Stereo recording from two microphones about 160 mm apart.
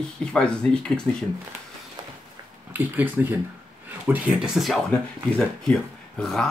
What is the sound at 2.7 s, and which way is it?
Speech, 10° right (ahead or behind).